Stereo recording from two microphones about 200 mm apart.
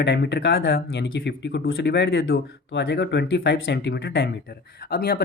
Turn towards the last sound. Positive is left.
turn(degrees=50)  # may be behind; listen again after turning